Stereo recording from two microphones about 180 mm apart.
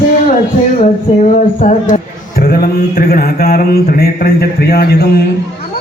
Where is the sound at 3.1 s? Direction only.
55° left (ahead or behind).